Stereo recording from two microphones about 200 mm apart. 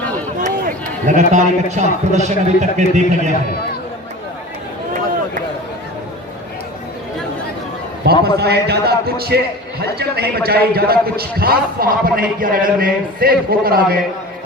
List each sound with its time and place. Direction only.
1.0 s a man's voice: 35° right (ahead or behind)
8.2 s a man's voice: 55° right (ahead or behind)